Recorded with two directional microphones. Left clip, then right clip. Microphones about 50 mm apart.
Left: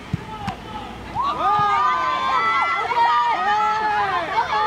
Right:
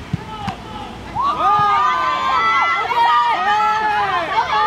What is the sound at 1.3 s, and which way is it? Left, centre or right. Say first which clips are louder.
Run: right 4 dB; right.